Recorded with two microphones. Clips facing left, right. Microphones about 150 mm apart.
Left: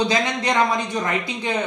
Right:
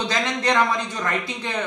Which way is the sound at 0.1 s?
10° left (ahead or behind).